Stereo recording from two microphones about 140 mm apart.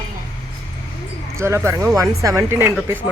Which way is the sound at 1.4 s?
20° right (ahead or behind).